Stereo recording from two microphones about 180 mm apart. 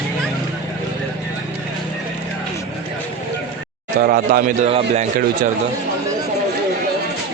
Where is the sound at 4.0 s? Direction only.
50° right (ahead or behind).